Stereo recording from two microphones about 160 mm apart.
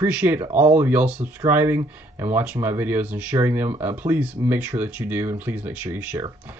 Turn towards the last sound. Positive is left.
turn(degrees=-10)  # may be behind; listen again after turning